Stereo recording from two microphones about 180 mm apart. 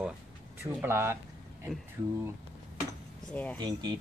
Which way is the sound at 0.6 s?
15° right (ahead or behind).